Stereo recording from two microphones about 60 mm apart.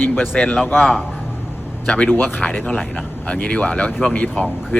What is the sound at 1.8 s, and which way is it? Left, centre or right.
Speech, centre.